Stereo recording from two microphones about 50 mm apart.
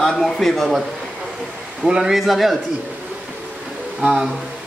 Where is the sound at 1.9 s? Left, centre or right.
Centre.